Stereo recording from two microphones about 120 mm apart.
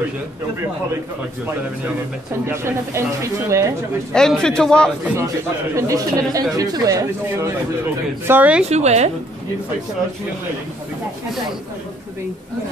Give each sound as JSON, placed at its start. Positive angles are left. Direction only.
{"t": 2.4, "sound": "speech", "side_deg": -20}
{"t": 4.1, "sound": "a man's voice", "side_deg": 5}
{"t": 5.8, "sound": "speech", "side_deg": -25}
{"t": 8.3, "sound": "speech", "side_deg": -15}
{"t": 8.6, "sound": "a woman's voice", "side_deg": -65}